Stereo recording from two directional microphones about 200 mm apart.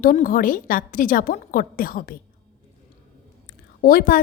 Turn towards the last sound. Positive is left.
turn(degrees=45)  # may be behind; listen again after turning